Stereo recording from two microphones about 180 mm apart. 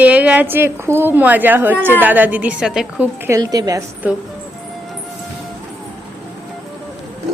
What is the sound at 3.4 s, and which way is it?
Speech, 20° right (ahead or behind).